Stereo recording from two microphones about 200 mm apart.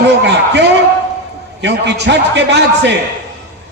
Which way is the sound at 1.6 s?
60° right (ahead or behind).